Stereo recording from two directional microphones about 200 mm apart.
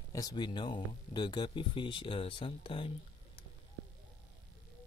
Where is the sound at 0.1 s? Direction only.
20° left (ahead or behind).